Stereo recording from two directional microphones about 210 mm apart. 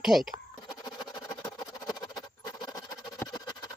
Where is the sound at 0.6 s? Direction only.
20° left (ahead or behind).